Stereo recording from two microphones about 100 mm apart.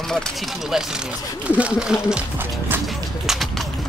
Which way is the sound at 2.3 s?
20° right (ahead or behind).